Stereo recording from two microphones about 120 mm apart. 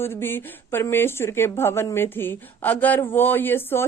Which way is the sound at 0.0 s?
20° left (ahead or behind).